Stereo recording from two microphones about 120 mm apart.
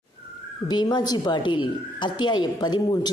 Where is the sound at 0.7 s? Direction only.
35° left (ahead or behind).